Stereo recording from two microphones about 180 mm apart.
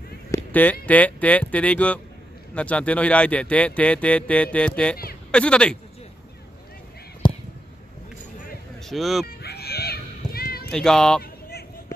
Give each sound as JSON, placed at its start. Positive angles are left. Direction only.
{"t": 0.5, "sound": "speech", "side_deg": 10}
{"t": 7.2, "sound": "a sound", "side_deg": 25}
{"t": 8.8, "sound": "speech", "side_deg": 0}
{"t": 9.4, "sound": "children playing", "side_deg": 60}
{"t": 10.7, "sound": "speech", "side_deg": 5}